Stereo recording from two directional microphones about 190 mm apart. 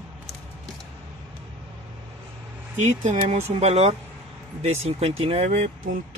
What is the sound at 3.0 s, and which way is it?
Speech, 35° right (ahead or behind).